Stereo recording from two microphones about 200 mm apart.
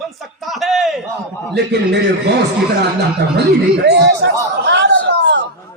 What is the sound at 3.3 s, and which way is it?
Speech, 55° right (ahead or behind).